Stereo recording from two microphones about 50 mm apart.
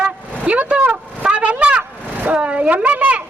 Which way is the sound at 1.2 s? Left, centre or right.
Right.